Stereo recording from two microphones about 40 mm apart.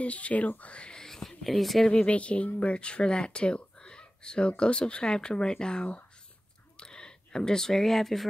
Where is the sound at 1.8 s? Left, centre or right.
Left.